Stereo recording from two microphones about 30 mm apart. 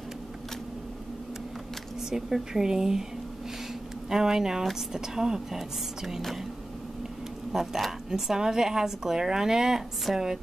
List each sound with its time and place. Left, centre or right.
2.0 s speech: centre
4.1 s speech: centre
7.5 s speech: centre
8.1 s speech: centre